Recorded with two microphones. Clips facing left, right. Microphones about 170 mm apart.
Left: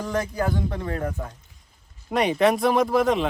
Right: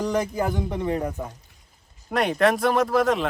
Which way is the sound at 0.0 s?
20° right (ahead or behind).